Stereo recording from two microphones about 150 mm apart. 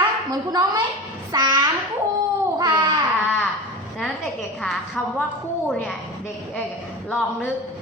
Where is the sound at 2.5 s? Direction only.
30° right (ahead or behind).